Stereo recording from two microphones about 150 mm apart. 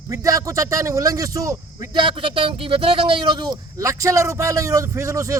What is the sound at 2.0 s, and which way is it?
A man's voice, 35° right (ahead or behind).